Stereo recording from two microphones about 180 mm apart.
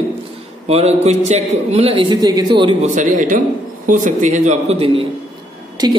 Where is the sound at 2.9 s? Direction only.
45° right (ahead or behind).